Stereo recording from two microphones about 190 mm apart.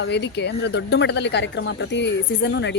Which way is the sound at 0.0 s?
65° left (ahead or behind).